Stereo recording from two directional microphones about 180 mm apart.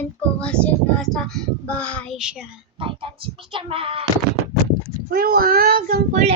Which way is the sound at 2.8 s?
30° right (ahead or behind).